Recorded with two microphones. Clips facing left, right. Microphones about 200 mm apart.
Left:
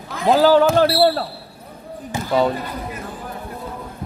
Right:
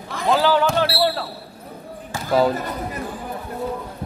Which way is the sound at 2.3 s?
Centre (ahead or behind).